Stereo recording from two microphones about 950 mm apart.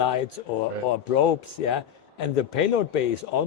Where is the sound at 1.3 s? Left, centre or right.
Left.